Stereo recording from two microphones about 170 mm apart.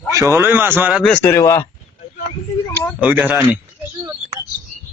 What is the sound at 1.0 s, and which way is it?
Speech, 10° left (ahead or behind).